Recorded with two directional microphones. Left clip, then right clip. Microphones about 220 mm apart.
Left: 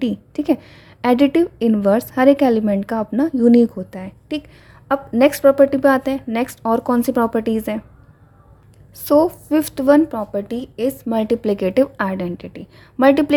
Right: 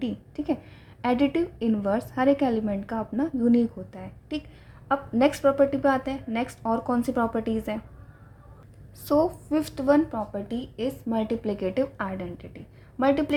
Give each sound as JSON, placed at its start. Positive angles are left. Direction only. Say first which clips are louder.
{"t": 0.0, "sound": "a woman's voice", "louder": "left 10 dB", "side_deg": 40}
{"t": 9.0, "sound": "a woman's voice", "louder": "left 9 dB", "side_deg": 35}